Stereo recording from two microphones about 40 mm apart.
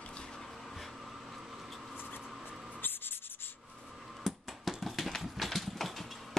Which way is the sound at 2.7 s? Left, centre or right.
Left.